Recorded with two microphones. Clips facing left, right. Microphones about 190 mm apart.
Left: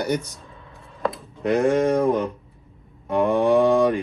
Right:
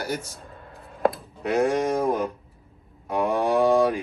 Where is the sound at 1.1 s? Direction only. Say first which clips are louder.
Left 2 dB; centre (ahead or behind).